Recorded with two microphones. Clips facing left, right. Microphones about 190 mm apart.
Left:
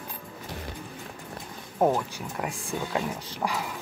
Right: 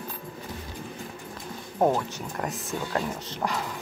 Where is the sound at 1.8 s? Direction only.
10° left (ahead or behind).